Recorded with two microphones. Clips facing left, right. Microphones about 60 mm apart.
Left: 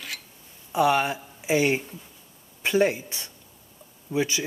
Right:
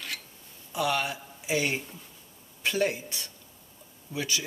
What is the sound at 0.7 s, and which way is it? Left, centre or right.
Speech, left.